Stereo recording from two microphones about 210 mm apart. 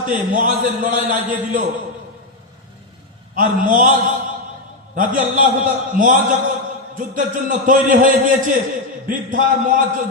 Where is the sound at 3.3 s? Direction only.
40° right (ahead or behind).